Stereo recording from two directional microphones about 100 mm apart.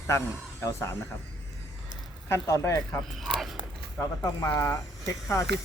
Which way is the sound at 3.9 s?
35° left (ahead or behind).